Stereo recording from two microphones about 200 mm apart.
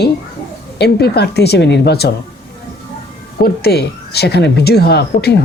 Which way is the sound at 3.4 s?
50° left (ahead or behind).